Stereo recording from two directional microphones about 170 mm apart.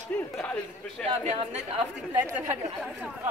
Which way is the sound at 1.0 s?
35° right (ahead or behind).